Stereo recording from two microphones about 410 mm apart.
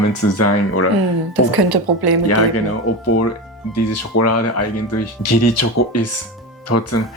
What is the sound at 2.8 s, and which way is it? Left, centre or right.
Speech, left.